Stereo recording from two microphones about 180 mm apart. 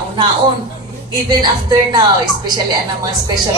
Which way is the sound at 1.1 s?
25° right (ahead or behind).